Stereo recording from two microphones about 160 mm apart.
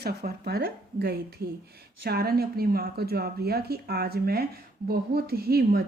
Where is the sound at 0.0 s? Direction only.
80° right.